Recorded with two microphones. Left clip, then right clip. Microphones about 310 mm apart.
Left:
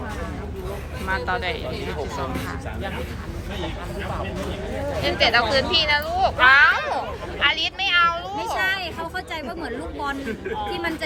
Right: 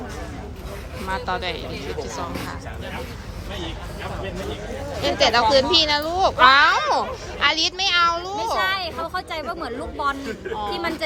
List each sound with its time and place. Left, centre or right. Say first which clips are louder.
1.0 s speech: left 1 dB; centre
5.0 s speech: right 2 dB; centre
8.5 s speech: even; right